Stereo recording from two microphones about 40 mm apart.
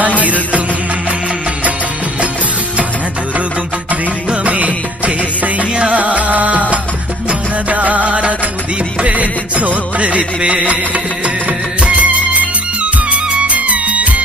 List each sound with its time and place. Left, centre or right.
0.2 s music: right
4.4 s music: right
5.7 s music: right
6.0 s music: right